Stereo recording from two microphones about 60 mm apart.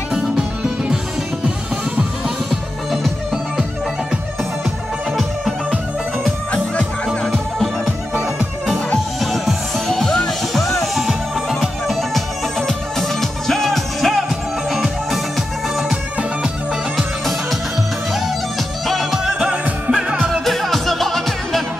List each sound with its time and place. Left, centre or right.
0.1 s music: centre
6.5 s music: centre
7.2 s music: centre
9.2 s music: centre
18.9 s music: centre
20.4 s music: centre